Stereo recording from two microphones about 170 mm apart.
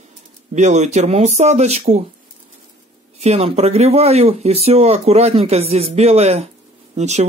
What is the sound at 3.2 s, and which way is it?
Speech, 40° right (ahead or behind).